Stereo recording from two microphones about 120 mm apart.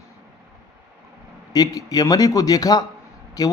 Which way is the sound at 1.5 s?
30° left (ahead or behind).